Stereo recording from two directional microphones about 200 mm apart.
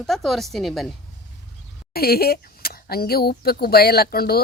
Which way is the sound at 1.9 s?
50° left (ahead or behind).